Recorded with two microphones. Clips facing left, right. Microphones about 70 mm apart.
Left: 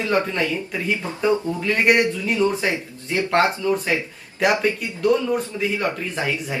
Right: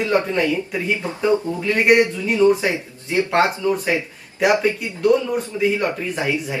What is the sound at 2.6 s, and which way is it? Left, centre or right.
Speech, centre.